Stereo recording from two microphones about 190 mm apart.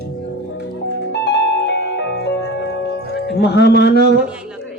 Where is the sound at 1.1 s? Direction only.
60° left (ahead or behind).